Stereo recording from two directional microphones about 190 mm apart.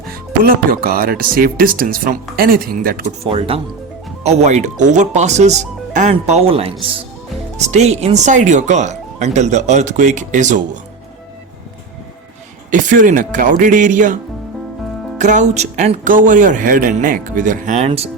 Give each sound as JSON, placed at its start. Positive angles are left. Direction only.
{"t": 0.4, "sound": "speech", "side_deg": -50}
{"t": 3.2, "sound": "speech", "side_deg": -30}
{"t": 12.7, "sound": "speech", "side_deg": -40}
{"t": 15.2, "sound": "speech", "side_deg": -40}